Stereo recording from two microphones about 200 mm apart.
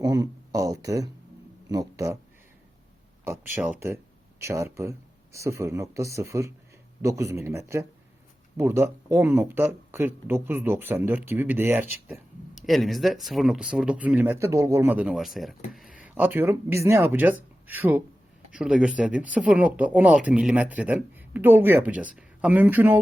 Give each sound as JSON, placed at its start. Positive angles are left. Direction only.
{"t": 0.0, "sound": "speech", "side_deg": -15}
{"t": 3.2, "sound": "speech", "side_deg": -10}
{"t": 12.1, "sound": "speech", "side_deg": 0}